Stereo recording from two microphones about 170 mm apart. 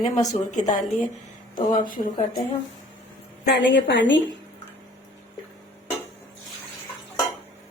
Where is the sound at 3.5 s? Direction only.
90° left.